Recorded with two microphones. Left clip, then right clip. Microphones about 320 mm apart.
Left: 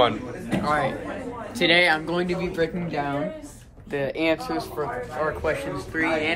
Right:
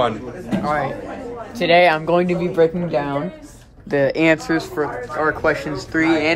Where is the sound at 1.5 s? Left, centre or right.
Centre.